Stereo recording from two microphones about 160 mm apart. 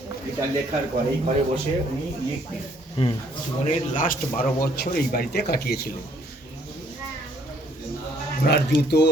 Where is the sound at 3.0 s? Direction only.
35° left (ahead or behind).